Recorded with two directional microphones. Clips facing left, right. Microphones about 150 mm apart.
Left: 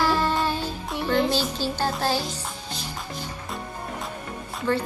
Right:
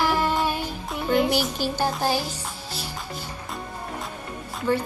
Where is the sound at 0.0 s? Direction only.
15° right (ahead or behind).